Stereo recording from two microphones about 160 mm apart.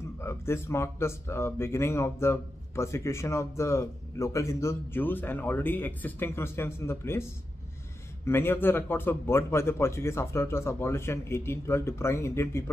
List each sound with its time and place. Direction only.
0.2 s speech: 15° left (ahead or behind)
8.3 s speech: 15° left (ahead or behind)